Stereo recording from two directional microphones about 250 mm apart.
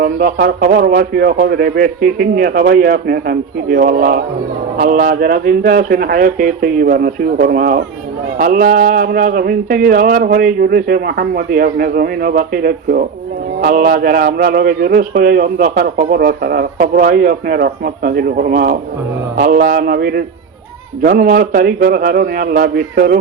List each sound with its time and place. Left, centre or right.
0.0 s a man's voice: right